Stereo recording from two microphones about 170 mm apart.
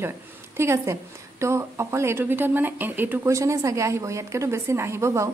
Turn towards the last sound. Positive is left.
turn(degrees=-15)  # may be behind; listen again after turning